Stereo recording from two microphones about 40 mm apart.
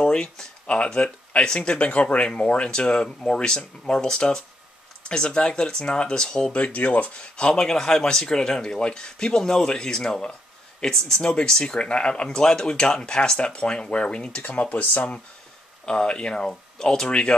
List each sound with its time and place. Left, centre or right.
0.0 s speech: left
2.7 s speech: left
6.5 s speech: left
14.4 s speech: left
15.8 s speech: left
17.1 s speech: left